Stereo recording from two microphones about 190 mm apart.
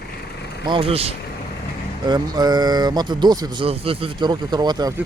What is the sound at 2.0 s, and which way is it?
Speech, 20° right (ahead or behind).